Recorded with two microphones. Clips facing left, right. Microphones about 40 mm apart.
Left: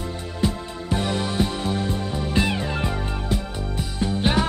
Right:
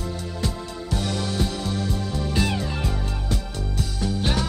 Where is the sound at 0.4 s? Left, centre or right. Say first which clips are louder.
Left 7 dB; left.